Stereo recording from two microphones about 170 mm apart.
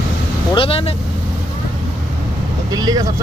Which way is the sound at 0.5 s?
35° left (ahead or behind).